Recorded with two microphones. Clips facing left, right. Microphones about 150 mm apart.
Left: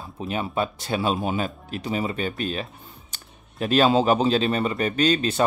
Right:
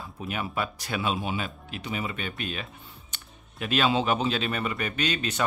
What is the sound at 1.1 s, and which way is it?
Speech, 45° left (ahead or behind).